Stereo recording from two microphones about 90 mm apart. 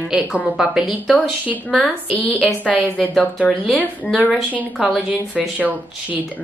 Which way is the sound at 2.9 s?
10° left (ahead or behind).